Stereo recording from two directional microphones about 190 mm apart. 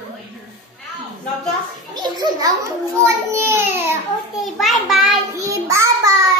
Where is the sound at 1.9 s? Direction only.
20° right (ahead or behind).